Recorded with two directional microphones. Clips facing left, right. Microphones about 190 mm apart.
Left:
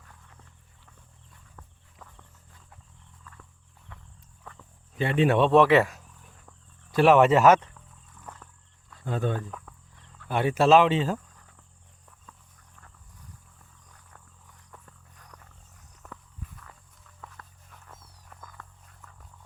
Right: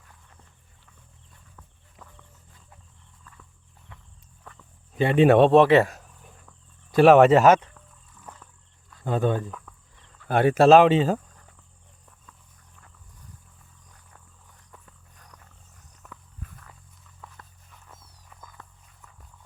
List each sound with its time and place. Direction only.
5.1 s speech: 60° right (ahead or behind)
5.5 s speech: 30° right (ahead or behind)
6.9 s speech: 40° right (ahead or behind)
9.0 s speech: 75° right (ahead or behind)
10.2 s speech: 45° right (ahead or behind)
17.7 s music: centre (ahead or behind)